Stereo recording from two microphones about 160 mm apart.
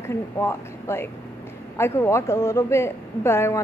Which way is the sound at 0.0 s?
15° left (ahead or behind).